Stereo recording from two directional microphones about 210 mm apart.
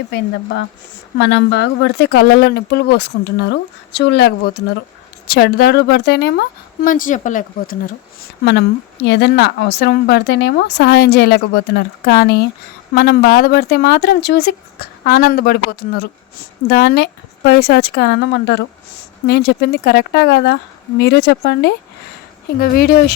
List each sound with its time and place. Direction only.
0.1 s a woman's voice: 55° left (ahead or behind); by 7.8 s 40° left (ahead or behind)
8.4 s a woman's voice: 55° left (ahead or behind)